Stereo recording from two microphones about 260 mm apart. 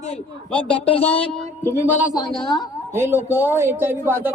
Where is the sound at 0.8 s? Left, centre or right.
Left.